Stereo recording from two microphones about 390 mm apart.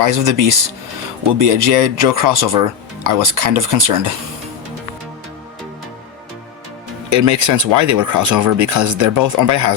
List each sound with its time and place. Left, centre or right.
0.0 s speech: right
7.1 s speech: right